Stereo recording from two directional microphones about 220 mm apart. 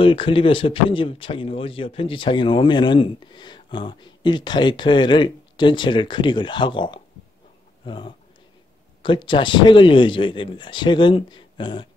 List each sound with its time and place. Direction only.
0.0 s speech: 25° left (ahead or behind)